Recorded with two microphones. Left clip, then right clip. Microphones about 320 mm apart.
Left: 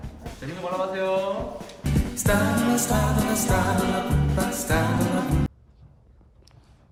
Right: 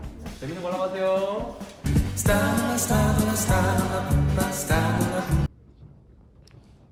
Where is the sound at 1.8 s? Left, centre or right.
Centre.